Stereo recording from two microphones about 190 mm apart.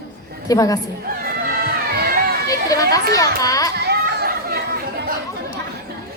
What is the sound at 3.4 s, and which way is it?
Speech, 20° left (ahead or behind).